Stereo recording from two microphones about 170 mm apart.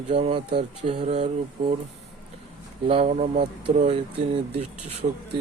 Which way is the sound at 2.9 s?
40° right (ahead or behind).